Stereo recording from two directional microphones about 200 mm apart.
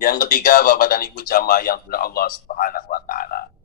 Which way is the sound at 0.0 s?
45° left (ahead or behind).